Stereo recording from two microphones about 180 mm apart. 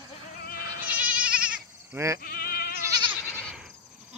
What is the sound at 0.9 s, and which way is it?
Goat, 5° right (ahead or behind).